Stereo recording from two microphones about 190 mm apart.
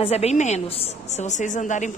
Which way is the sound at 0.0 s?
35° left (ahead or behind).